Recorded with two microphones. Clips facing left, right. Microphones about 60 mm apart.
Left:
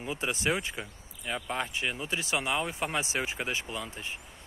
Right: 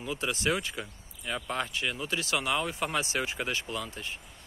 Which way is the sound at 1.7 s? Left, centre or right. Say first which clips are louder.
Even; left.